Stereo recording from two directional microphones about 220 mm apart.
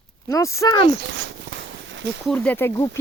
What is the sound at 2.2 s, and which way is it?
Speech, 5° left (ahead or behind).